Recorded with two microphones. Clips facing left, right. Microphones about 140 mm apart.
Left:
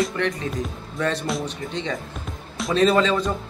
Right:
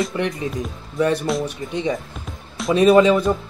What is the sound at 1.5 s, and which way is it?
Speech, 10° right (ahead or behind).